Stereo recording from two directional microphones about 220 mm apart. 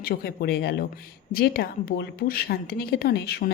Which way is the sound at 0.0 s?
45° left (ahead or behind).